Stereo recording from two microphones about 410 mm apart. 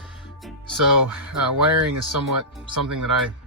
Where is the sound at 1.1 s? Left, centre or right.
Centre.